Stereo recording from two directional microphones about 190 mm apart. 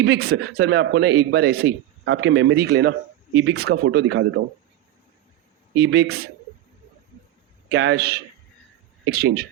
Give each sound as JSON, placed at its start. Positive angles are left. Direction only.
{"t": 0.0, "sound": "speech", "side_deg": -60}
{"t": 5.7, "sound": "speech", "side_deg": -60}
{"t": 7.7, "sound": "speech", "side_deg": -60}